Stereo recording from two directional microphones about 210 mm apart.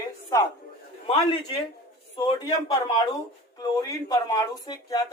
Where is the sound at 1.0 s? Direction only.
25° left (ahead or behind).